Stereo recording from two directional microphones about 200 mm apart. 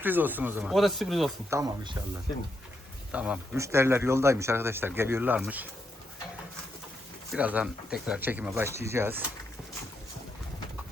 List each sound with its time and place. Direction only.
0.0 s speech: 10° right (ahead or behind)
1.5 s speech: 15° right (ahead or behind)
3.1 s speech: 5° right (ahead or behind)
7.3 s speech: 5° right (ahead or behind)